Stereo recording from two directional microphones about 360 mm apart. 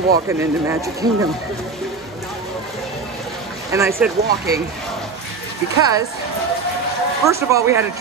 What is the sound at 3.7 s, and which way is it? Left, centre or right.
Speech, centre.